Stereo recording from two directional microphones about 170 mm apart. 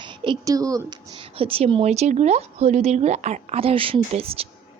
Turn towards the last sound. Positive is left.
turn(degrees=-35)  # may be behind; listen again after turning